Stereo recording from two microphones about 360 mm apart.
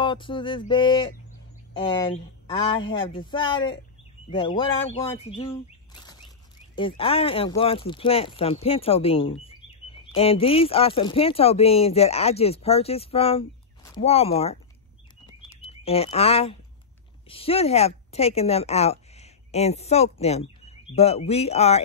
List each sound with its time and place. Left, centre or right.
0.0 s speech: centre
6.7 s a woman's voice: centre